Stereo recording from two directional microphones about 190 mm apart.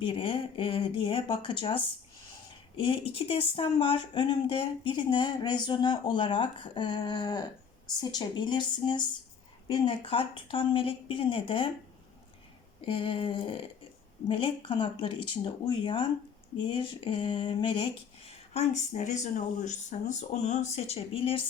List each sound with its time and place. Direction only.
0.0 s speech: 25° left (ahead or behind)
12.8 s speech: 25° left (ahead or behind)
16.6 s a sound: 25° left (ahead or behind)